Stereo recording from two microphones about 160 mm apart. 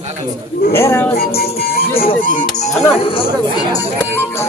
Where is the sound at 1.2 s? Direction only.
70° left (ahead or behind); by 2.7 s 55° left (ahead or behind).